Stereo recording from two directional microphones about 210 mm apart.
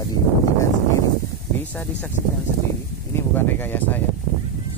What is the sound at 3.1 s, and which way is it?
Speech, 10° left (ahead or behind).